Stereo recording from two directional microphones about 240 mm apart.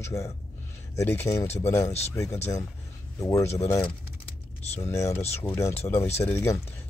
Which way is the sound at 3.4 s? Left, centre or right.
Left.